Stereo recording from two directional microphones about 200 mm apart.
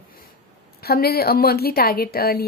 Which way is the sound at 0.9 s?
50° left (ahead or behind).